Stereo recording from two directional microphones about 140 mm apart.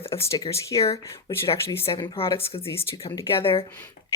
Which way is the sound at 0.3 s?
25° left (ahead or behind).